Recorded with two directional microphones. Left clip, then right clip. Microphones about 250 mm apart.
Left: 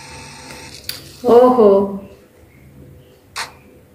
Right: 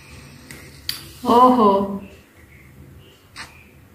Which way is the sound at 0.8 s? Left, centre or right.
Centre.